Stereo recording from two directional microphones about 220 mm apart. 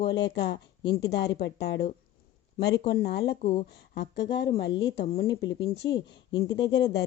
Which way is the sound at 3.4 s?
25° left (ahead or behind).